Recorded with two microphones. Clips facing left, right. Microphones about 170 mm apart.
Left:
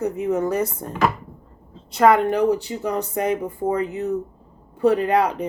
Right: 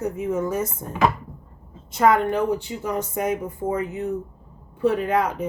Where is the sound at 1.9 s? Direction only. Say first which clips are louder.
Left 3 dB; 75° left (ahead or behind).